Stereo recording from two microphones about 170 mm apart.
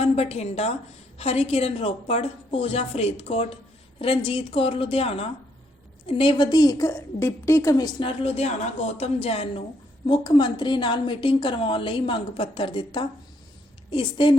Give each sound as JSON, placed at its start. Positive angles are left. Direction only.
{"t": 0.0, "sound": "a woman's voice", "side_deg": 35}